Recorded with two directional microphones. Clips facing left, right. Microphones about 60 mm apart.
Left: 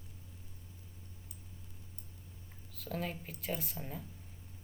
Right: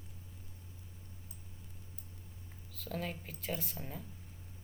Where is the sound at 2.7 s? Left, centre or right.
Centre.